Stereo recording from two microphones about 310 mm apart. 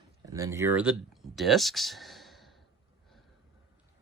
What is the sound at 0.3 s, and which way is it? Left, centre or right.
Speech, centre.